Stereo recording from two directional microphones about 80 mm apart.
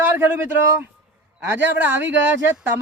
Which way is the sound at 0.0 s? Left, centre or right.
Right.